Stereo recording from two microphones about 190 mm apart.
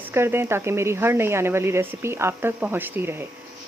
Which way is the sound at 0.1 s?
15° right (ahead or behind).